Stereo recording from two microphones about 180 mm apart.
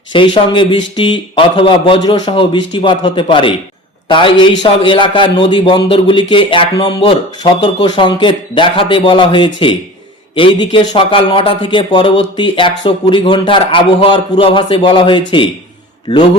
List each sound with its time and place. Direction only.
0.1 s speech: 25° left (ahead or behind)